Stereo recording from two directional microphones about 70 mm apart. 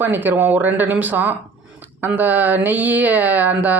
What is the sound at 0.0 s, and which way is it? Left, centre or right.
Speech, right.